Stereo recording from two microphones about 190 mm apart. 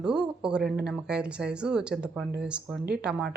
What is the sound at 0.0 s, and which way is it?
A woman's voice, 5° right (ahead or behind).